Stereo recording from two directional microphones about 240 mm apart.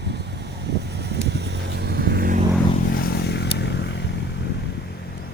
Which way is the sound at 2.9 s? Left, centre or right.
Left.